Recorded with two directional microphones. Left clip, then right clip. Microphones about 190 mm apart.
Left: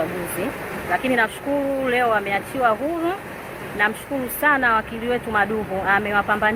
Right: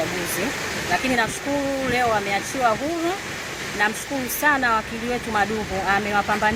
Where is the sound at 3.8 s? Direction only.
20° right (ahead or behind).